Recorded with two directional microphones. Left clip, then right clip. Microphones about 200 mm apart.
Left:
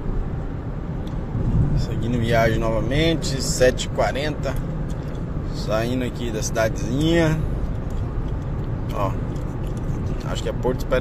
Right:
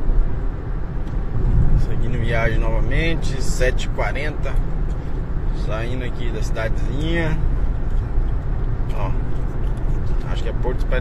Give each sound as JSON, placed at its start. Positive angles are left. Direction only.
{"t": 2.0, "sound": "speech", "side_deg": 25}
{"t": 5.7, "sound": "speech", "side_deg": 25}